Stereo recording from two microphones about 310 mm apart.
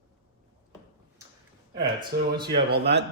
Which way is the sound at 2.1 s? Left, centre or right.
Right.